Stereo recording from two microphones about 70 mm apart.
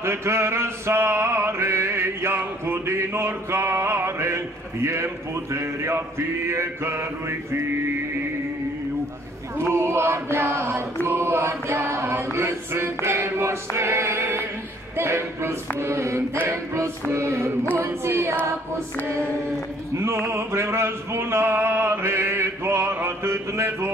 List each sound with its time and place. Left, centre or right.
0.0 s mantra: right
9.6 s mantra: right
20.0 s mantra: right